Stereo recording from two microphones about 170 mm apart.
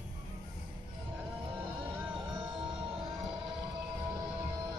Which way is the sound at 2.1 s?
25° right (ahead or behind).